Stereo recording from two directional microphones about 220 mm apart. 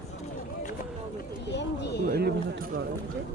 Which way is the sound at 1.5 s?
50° left (ahead or behind).